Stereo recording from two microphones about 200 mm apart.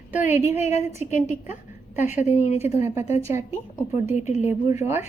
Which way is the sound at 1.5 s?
10° right (ahead or behind).